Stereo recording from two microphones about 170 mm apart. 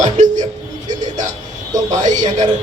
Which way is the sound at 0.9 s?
45° right (ahead or behind).